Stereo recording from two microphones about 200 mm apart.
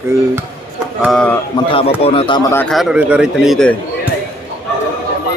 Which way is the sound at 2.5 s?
10° left (ahead or behind).